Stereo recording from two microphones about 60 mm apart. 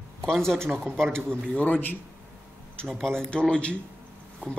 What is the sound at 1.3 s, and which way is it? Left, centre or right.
Speech, centre.